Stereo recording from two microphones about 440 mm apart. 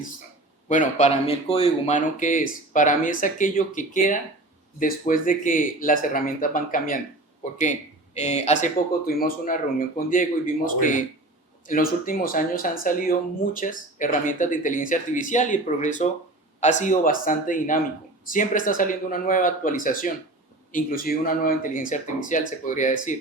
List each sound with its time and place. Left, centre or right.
0.7 s speech: centre